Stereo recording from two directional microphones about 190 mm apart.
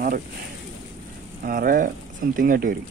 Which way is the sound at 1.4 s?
50° right (ahead or behind).